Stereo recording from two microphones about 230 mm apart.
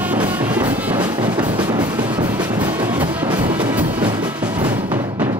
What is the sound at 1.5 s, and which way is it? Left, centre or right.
Music, centre.